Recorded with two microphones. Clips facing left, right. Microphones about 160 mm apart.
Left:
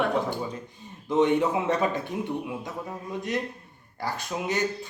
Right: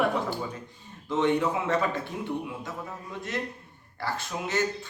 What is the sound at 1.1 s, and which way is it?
A man's voice, 20° left (ahead or behind).